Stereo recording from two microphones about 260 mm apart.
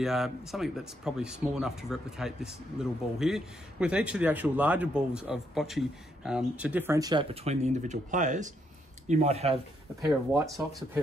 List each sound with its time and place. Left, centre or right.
0.0 s speech: centre; by 9.6 s right
10.0 s speech: centre